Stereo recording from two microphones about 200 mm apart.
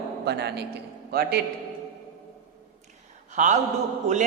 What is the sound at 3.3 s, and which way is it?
Speech, 40° right (ahead or behind).